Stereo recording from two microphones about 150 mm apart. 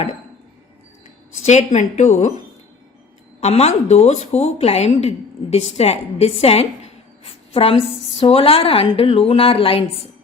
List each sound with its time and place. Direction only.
1.5 s a woman's voice: 50° left (ahead or behind)
3.4 s a woman's voice: 45° left (ahead or behind)